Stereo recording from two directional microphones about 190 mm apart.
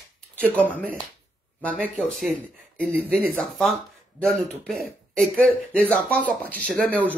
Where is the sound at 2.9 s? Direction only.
10° right (ahead or behind).